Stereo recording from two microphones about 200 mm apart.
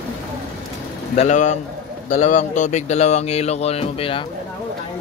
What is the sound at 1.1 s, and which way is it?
Speech, 35° left (ahead or behind).